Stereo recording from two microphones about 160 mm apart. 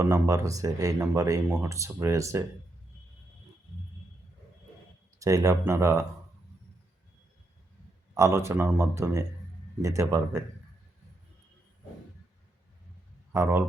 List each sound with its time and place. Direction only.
0.0 s speech: 20° right (ahead or behind)
5.2 s speech: 20° right (ahead or behind)
8.1 s speech: 15° right (ahead or behind)
13.3 s speech: 20° right (ahead or behind)